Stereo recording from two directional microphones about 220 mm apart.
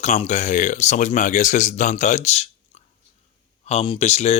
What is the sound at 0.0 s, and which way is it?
Speech, 30° left (ahead or behind).